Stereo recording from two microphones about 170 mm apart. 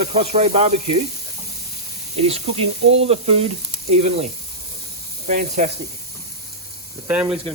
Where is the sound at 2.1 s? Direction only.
35° right (ahead or behind).